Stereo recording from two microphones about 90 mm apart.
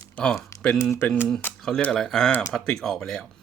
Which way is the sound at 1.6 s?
5° left (ahead or behind).